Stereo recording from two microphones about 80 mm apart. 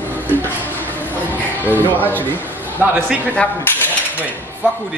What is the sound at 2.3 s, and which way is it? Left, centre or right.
Speech, right.